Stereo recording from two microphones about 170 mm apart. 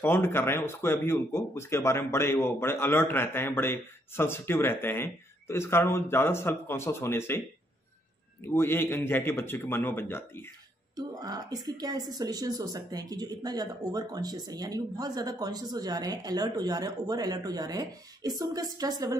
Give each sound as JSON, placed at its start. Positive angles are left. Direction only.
{"t": 0.0, "sound": "speech", "side_deg": 15}
{"t": 11.0, "sound": "a woman's voice", "side_deg": -25}